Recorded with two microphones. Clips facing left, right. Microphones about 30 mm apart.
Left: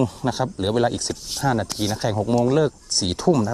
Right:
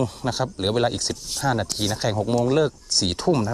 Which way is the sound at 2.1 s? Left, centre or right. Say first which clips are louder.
Left 2 dB; right.